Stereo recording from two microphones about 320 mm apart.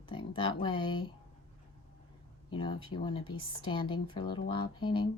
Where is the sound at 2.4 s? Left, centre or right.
Centre.